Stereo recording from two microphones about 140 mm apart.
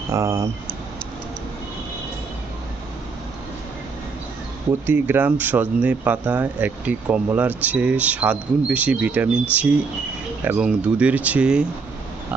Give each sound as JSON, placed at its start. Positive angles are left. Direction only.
{"t": 0.1, "sound": "speech", "side_deg": -20}
{"t": 4.9, "sound": "speech", "side_deg": -15}